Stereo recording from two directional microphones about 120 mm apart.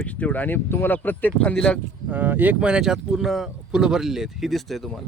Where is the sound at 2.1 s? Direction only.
15° right (ahead or behind); by 5.0 s centre (ahead or behind).